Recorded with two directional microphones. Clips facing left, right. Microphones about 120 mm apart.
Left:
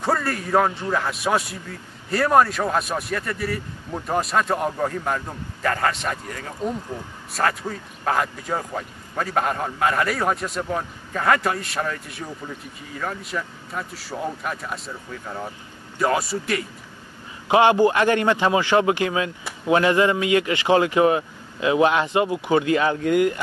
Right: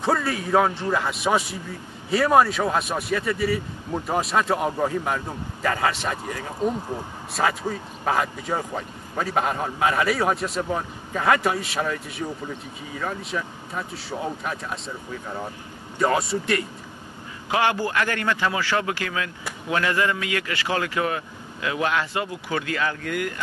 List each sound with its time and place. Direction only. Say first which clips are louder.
0.0 s speech: even; centre (ahead or behind)
6.9 s speech: right 2 dB; 15° right (ahead or behind)
7.4 s speech: even; 5° right (ahead or behind)
16.0 s speech: even; centre (ahead or behind)
17.5 s a man's voice: left 7 dB; 20° left (ahead or behind)